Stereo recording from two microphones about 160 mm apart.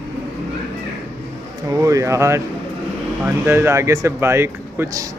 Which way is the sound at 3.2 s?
15° right (ahead or behind).